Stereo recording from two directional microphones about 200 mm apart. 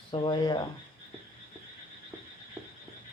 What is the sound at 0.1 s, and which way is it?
Speech, 25° left (ahead or behind).